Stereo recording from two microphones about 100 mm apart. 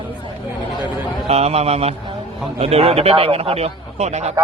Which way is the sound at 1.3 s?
90° right.